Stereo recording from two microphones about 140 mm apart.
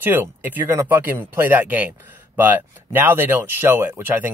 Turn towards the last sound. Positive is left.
turn(degrees=-15)  # may be behind; listen again after turning